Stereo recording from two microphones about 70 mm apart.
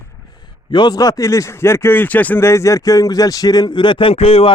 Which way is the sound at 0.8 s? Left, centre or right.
Left.